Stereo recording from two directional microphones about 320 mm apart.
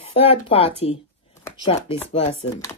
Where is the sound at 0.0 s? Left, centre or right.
Centre.